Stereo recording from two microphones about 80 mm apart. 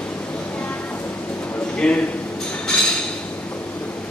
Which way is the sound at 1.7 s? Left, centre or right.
Centre.